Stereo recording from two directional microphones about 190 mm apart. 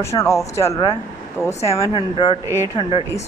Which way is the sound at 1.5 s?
35° left (ahead or behind).